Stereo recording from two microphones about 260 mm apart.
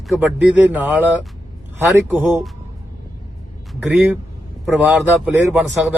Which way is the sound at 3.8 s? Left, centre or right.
Centre.